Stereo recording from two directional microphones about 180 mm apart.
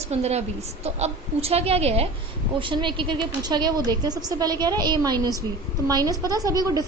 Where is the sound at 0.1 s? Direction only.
35° right (ahead or behind).